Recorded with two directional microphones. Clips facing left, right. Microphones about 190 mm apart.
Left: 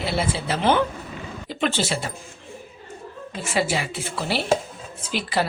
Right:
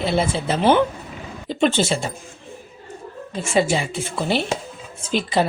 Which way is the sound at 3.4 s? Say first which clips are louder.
Right 5 dB; 25° right (ahead or behind).